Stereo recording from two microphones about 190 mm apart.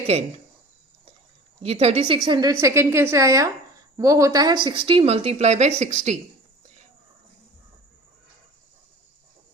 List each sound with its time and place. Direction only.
0.1 s speech: 35° right (ahead or behind)
1.6 s a woman's voice: 35° right (ahead or behind)